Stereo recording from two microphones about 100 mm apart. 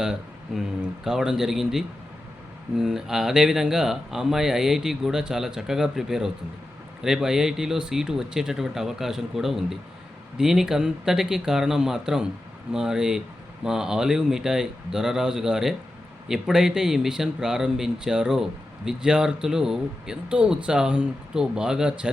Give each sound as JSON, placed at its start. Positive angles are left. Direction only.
{"t": 0.0, "sound": "speech", "side_deg": -5}